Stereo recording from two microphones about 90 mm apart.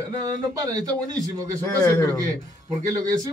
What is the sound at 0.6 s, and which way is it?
Speech, 40° right (ahead or behind).